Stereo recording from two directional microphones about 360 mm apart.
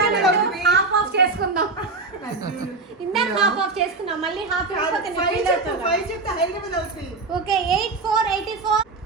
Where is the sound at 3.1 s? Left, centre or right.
Centre.